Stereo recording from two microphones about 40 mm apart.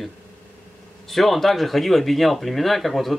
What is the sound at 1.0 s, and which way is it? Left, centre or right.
Speech, centre.